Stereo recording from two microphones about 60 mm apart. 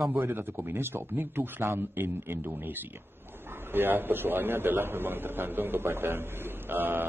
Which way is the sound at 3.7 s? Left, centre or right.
Right.